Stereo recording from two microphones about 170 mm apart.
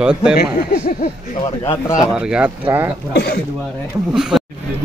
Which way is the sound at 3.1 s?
70° left (ahead or behind).